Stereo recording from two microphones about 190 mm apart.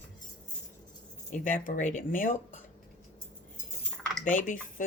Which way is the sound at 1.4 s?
45° left (ahead or behind).